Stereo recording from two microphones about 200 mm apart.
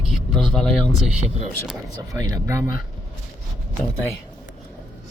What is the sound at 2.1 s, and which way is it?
Speech, 15° right (ahead or behind).